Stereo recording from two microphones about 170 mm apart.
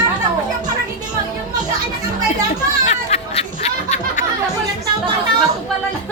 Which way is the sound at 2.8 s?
40° left (ahead or behind).